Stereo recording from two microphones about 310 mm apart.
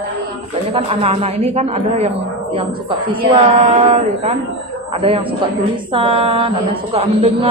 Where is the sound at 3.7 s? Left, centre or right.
Right.